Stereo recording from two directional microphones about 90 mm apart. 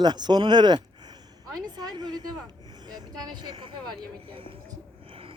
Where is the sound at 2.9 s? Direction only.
50° right (ahead or behind); by 4.5 s 80° right.